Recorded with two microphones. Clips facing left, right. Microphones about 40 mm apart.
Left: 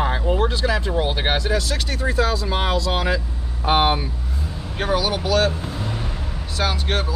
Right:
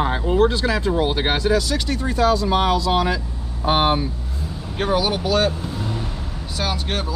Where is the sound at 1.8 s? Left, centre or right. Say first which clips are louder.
Even; left.